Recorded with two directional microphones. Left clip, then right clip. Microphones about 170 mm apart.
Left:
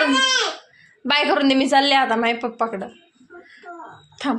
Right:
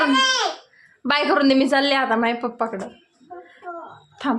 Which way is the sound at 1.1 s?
10° right (ahead or behind).